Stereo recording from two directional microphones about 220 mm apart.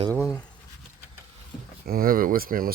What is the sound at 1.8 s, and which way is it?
Speech, 40° right (ahead or behind).